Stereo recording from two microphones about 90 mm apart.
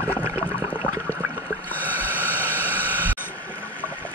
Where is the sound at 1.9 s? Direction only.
20° right (ahead or behind).